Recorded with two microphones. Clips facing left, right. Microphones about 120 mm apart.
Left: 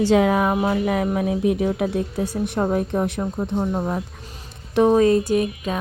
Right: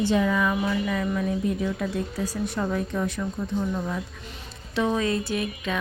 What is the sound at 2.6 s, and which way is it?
Speech, 45° left (ahead or behind).